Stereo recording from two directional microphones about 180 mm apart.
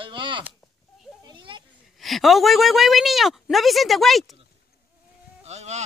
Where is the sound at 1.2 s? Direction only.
25° right (ahead or behind).